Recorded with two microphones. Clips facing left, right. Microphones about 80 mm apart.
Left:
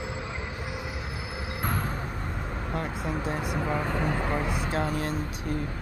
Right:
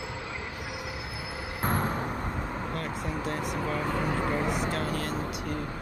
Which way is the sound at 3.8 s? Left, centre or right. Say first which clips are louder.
Even; centre.